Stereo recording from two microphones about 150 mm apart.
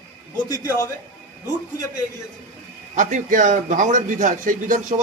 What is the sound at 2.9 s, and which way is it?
A man's voice, 55° right (ahead or behind).